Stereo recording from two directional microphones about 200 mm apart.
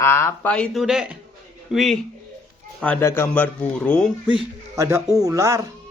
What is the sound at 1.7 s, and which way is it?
Moo, centre (ahead or behind).